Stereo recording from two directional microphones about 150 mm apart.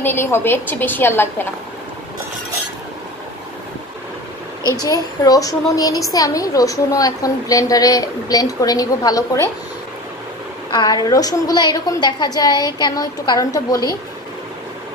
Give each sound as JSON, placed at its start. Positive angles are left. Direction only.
{"t": 0.0, "sound": "a woman's voice", "side_deg": 15}
{"t": 4.8, "sound": "a woman's voice", "side_deg": 25}
{"t": 10.7, "sound": "a woman's voice", "side_deg": 25}